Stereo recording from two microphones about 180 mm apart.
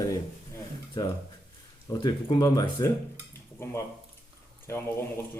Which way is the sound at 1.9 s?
20° left (ahead or behind).